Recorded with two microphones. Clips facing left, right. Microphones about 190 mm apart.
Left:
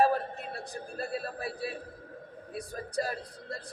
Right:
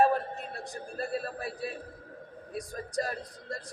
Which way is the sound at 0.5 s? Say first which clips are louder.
Even; centre (ahead or behind).